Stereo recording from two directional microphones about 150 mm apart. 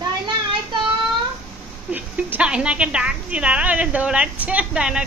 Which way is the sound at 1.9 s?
10° right (ahead or behind).